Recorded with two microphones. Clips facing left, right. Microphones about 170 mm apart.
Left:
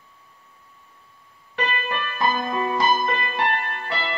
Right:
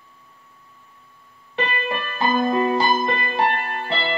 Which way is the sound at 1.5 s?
30° right (ahead or behind).